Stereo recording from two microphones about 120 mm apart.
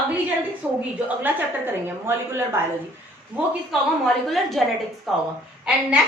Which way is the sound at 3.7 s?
Centre (ahead or behind).